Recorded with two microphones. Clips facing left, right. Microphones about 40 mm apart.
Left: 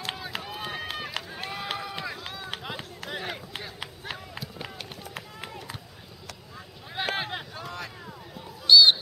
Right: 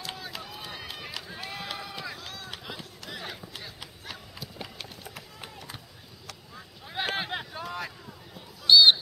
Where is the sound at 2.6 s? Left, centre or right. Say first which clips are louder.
Left 4 dB; left.